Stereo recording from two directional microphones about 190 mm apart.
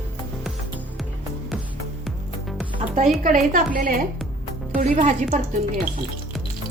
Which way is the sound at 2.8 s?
40° right (ahead or behind).